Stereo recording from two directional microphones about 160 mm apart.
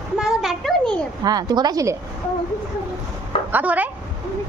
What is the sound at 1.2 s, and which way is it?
Speech, 25° right (ahead or behind).